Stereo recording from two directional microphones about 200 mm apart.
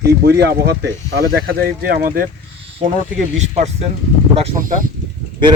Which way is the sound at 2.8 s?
35° right (ahead or behind).